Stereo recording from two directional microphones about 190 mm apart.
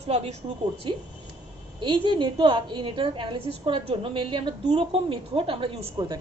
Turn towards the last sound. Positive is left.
turn(degrees=-25)  # may be behind; listen again after turning